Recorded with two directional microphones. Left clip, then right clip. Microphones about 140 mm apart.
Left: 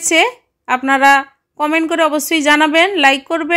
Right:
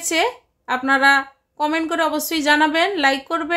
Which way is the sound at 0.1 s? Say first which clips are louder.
Left 7 dB; 30° left (ahead or behind).